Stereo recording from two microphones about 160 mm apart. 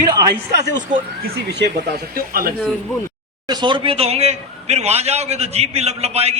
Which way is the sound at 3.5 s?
30° right (ahead or behind).